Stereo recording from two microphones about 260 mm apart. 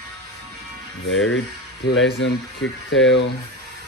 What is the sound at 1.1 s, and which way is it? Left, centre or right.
Speech, left.